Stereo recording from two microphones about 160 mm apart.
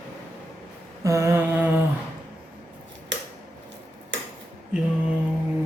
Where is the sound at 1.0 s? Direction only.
20° right (ahead or behind).